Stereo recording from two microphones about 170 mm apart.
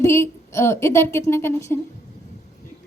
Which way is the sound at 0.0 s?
15° left (ahead or behind).